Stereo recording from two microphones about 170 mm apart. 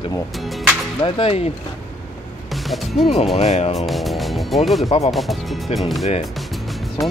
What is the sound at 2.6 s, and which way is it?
Speech, centre (ahead or behind).